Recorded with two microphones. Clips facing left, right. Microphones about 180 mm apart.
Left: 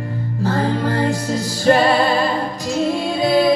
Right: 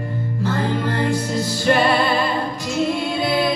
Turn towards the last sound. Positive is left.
turn(degrees=40)  # may be behind; listen again after turning